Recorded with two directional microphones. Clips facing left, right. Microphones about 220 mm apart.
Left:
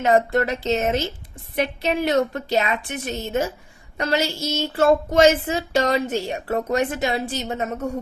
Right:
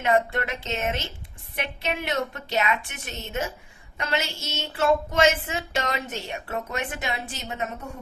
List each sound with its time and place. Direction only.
0.0 s speech: 40° left (ahead or behind)